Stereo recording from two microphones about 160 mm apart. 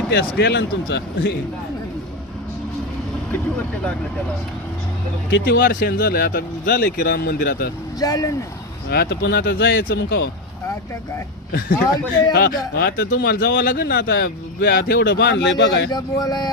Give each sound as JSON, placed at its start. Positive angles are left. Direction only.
{"t": 0.1, "sound": "speech", "side_deg": 90}
{"t": 5.5, "sound": "speech", "side_deg": 75}
{"t": 7.9, "sound": "speech", "side_deg": 20}
{"t": 8.9, "sound": "speech", "side_deg": 90}
{"t": 12.3, "sound": "speech", "side_deg": 80}
{"t": 15.9, "sound": "speech", "side_deg": 25}